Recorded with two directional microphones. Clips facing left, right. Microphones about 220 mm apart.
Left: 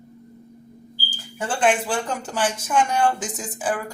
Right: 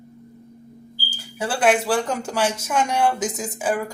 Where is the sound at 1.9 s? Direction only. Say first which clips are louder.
Right 4 dB; 10° right (ahead or behind).